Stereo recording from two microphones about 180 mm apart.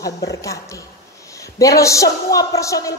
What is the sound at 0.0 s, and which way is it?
Speech, 20° left (ahead or behind).